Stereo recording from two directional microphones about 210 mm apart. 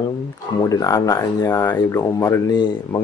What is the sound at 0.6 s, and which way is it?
Speech, 15° left (ahead or behind).